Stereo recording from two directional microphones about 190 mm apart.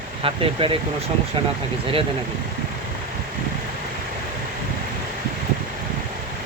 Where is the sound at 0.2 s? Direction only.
30° right (ahead or behind).